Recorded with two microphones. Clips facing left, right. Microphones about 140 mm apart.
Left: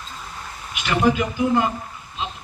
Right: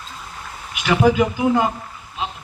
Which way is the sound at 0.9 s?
90° right.